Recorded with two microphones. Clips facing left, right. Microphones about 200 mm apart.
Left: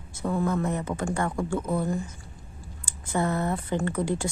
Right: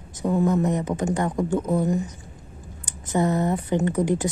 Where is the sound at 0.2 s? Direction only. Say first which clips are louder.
Right 5 dB; 20° right (ahead or behind).